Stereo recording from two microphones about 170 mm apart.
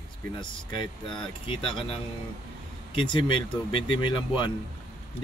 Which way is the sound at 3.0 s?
30° left (ahead or behind).